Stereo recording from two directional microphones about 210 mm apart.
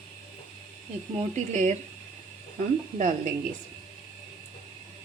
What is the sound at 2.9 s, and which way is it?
Speech, 35° right (ahead or behind).